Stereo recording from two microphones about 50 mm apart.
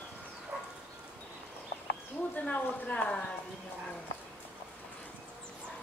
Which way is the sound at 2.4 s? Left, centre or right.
Left.